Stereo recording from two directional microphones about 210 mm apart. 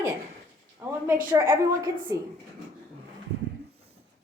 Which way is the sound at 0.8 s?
10° right (ahead or behind).